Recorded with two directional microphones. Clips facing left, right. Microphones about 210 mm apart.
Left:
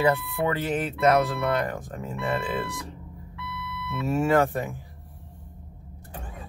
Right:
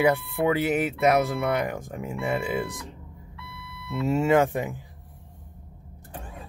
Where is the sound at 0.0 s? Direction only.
10° right (ahead or behind).